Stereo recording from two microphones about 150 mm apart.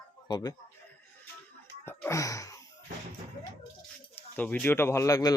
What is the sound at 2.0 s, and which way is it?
Gasp, 20° left (ahead or behind).